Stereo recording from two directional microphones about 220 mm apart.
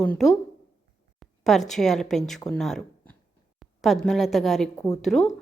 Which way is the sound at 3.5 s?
Centre (ahead or behind).